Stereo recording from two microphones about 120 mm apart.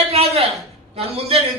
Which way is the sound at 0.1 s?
55° right (ahead or behind).